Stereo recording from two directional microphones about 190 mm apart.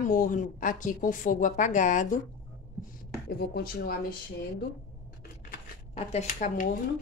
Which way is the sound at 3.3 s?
55° left (ahead or behind).